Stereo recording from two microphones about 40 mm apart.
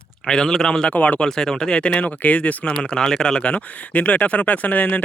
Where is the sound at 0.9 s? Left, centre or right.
Left.